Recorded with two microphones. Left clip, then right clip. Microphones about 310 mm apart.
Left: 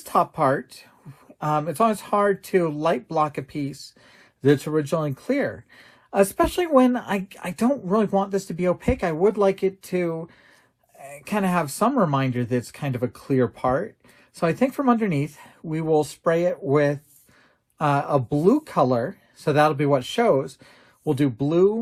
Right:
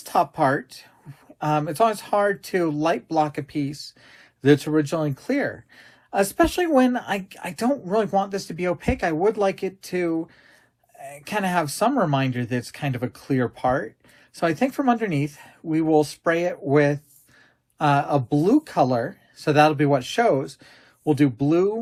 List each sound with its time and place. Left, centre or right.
0.0 s speech: left